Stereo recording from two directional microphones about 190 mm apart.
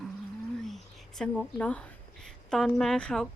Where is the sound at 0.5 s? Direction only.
Centre (ahead or behind).